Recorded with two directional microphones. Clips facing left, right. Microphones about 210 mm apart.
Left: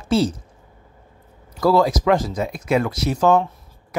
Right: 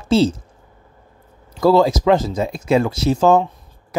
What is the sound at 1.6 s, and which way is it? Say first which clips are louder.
Speech: right 3 dB; 25° right (ahead or behind).